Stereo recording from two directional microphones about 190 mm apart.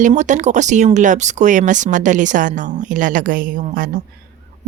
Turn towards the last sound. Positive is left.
turn(degrees=-45)  # may be behind; listen again after turning